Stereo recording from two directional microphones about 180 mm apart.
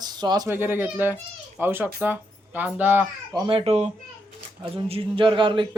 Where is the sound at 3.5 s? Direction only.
35° right (ahead or behind).